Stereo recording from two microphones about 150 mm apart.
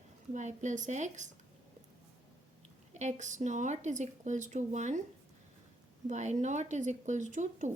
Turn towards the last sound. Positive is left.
turn(degrees=-55)  # may be behind; listen again after turning